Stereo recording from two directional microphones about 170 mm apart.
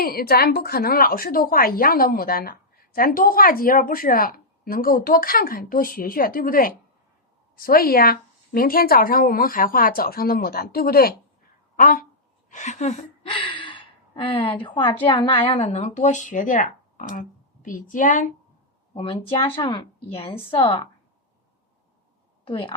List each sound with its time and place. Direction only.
0.0 s a woman's voice: 60° left (ahead or behind)
12.5 s speech: 45° left (ahead or behind)
13.2 s gasp: 30° left (ahead or behind)
14.6 s a woman's voice: 30° left (ahead or behind); by 18.3 s 50° left (ahead or behind)
18.9 s a woman's voice: 35° left (ahead or behind)
22.4 s a woman's voice: 30° left (ahead or behind)